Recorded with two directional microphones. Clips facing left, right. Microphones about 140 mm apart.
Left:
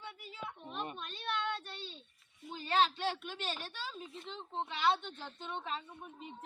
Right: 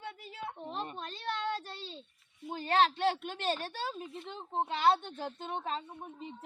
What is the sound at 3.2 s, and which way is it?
A woman's voice, 55° right (ahead or behind).